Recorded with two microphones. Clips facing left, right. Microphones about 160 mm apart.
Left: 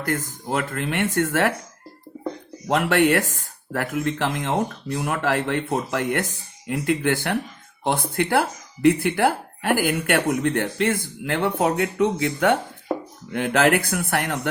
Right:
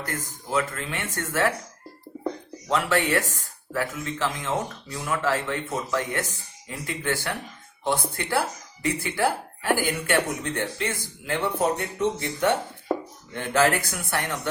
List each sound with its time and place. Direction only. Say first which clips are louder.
0.1 s speech: left 4 dB; 55° left (ahead or behind)
2.6 s speech: left 5 dB; 60° left (ahead or behind)